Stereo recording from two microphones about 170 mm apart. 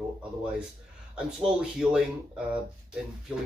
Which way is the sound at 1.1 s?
5° right (ahead or behind).